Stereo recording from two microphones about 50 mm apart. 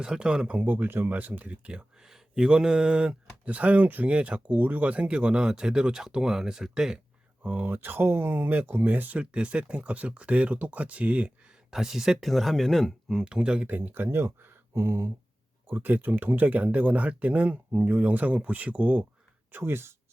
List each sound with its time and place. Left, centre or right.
0.0 s speech: centre
0.7 s speech: right
2.0 s speech: centre
7.4 s speech: right
7.7 s speech: right
9.3 s speech: right
11.7 s speech: centre
13.1 s speech: centre
13.7 s speech: right
15.6 s speech: right
19.5 s speech: right